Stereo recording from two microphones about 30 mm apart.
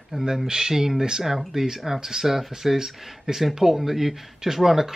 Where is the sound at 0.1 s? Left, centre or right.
Right.